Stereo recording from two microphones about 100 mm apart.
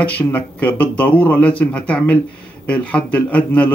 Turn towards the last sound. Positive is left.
turn(degrees=15)  # may be behind; listen again after turning